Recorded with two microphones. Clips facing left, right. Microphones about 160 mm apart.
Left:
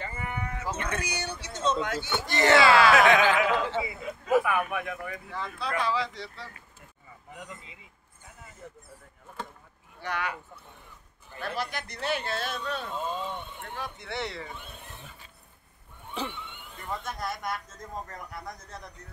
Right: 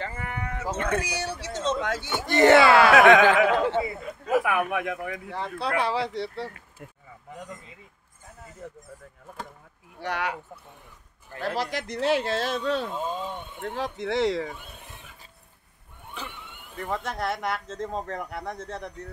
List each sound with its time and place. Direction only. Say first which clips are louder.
0.0 s livestock: right 2 dB; 85° right
0.7 s speech: right 6 dB; 50° right (ahead or behind)
1.0 s speech: right 4 dB; 90° right
2.2 s speech: right 5 dB; 55° right (ahead or behind)
4.3 s speech: right 1 dB; 80° right
9.9 s speech: right 3 dB; 75° right (ahead or behind)
11.3 s speech: right 5 dB; 90° right
13.1 s speech: right 2 dB; 10° right (ahead or behind)
13.6 s speech: right 8 dB; 90° right
16.7 s speech: right 6 dB; 70° right (ahead or behind)